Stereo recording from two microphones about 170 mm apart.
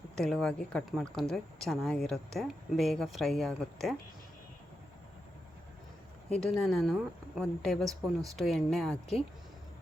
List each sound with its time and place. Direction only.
0.2 s a woman's voice: 5° left (ahead or behind)
6.3 s a woman's voice: 5° left (ahead or behind)